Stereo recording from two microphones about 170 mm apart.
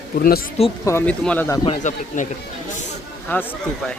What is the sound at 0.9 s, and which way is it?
Speech, 15° left (ahead or behind).